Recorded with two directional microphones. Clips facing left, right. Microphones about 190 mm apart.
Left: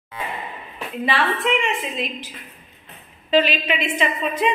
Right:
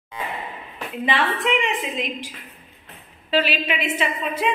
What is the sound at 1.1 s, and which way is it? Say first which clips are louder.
A woman's voice: left 1 dB; 15° right (ahead or behind).